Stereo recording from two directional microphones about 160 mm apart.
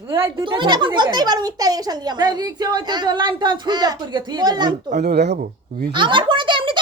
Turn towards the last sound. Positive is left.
turn(degrees=-30)  # may be behind; listen again after turning